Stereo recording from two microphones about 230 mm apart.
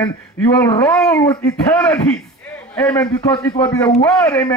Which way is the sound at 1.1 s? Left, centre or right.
Centre.